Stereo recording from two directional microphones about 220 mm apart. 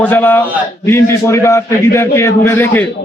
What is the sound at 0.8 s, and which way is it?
A man's voice, 10° left (ahead or behind).